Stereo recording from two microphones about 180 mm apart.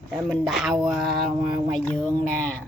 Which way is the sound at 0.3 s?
Centre (ahead or behind).